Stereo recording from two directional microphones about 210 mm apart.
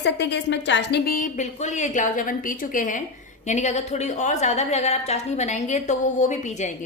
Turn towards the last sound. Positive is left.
turn(degrees=35)  # may be behind; listen again after turning